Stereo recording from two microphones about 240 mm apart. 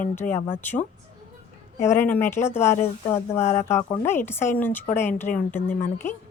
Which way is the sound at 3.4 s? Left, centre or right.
Left.